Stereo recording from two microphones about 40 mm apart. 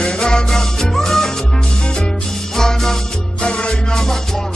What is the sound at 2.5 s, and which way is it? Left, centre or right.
Music, centre.